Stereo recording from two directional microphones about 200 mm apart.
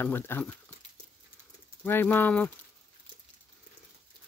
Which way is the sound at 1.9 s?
10° left (ahead or behind).